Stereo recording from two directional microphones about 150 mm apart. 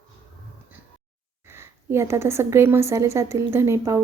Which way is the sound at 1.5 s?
15° right (ahead or behind).